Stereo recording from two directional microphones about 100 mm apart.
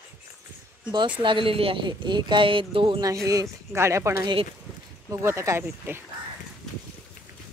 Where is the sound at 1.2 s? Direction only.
60° right (ahead or behind).